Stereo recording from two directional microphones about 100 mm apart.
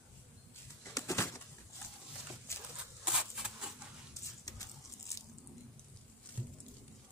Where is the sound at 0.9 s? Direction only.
30° left (ahead or behind).